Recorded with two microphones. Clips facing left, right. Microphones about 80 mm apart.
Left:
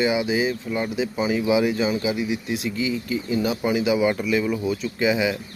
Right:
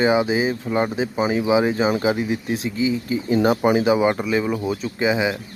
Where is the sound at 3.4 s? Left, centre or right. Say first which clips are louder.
Right 8 dB; right.